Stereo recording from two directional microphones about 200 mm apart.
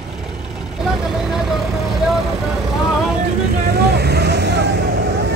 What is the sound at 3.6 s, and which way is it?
Vehicle, 55° right (ahead or behind).